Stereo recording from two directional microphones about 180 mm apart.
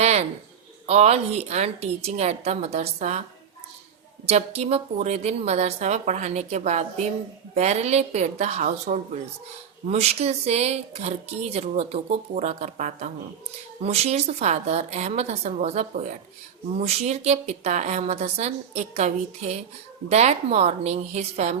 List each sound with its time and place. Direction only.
0.0 s a sound: 35° right (ahead or behind)
0.9 s speech: 35° right (ahead or behind)
4.3 s speech: 35° right (ahead or behind)